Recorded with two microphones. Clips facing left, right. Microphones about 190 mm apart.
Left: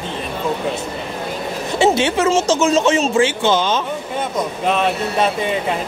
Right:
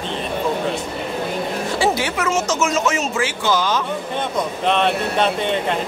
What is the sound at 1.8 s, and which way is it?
Speech, 25° left (ahead or behind).